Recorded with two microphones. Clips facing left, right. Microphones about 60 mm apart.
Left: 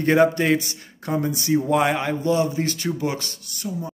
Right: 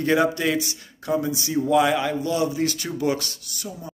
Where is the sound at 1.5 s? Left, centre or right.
Left.